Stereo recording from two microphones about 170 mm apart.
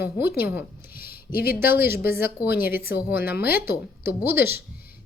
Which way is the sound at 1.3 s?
60° left (ahead or behind).